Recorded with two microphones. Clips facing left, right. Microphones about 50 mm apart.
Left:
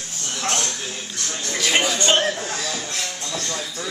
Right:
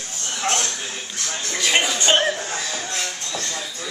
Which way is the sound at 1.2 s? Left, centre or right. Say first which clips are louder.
Right 1 dB; centre.